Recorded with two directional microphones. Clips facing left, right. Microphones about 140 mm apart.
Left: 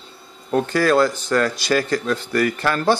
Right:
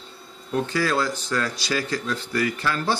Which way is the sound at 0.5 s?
55° left (ahead or behind).